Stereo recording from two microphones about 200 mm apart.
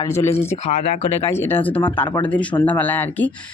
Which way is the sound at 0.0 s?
15° left (ahead or behind).